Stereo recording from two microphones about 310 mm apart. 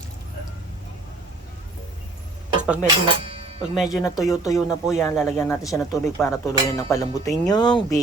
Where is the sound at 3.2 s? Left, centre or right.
Centre.